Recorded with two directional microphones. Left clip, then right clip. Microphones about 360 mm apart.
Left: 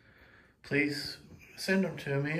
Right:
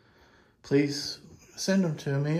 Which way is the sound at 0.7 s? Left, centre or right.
Centre.